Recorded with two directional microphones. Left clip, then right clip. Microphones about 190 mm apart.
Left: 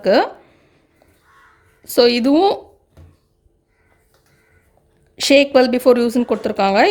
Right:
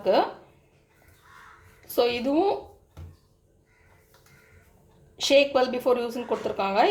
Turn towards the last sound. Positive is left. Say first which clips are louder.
# left 10 dB
turn(degrees=60)  # may be behind; listen again after turning